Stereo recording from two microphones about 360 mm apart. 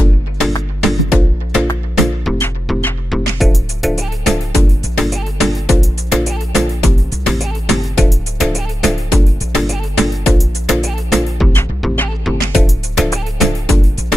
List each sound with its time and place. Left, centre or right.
0.5 s music: centre